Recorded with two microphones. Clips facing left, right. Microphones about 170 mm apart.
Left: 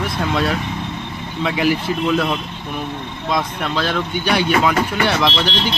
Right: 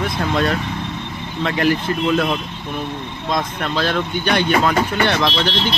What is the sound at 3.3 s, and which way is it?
Speech, 5° left (ahead or behind).